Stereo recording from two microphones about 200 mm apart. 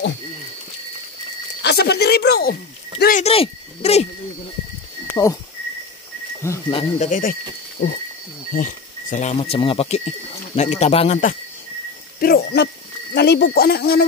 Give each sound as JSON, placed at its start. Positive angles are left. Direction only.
{"t": 1.6, "sound": "speech", "side_deg": 55}
{"t": 3.3, "sound": "speech", "side_deg": 30}
{"t": 5.1, "sound": "speech", "side_deg": 15}
{"t": 6.7, "sound": "speech", "side_deg": 25}
{"t": 7.1, "sound": "speech", "side_deg": 40}
{"t": 12.2, "sound": "speech", "side_deg": 50}